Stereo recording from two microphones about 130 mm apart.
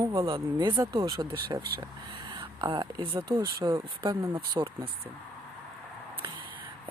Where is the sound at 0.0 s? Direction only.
25° right (ahead or behind).